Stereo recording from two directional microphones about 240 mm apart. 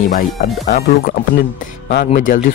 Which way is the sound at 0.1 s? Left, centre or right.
Left.